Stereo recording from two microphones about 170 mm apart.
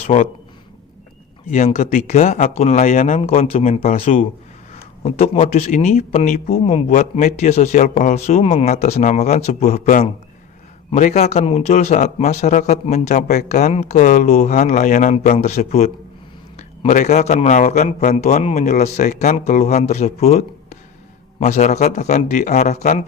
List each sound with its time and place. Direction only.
0.1 s speech: 35° left (ahead or behind)
1.5 s speech: 45° left (ahead or behind)
3.2 s speech: 35° left (ahead or behind)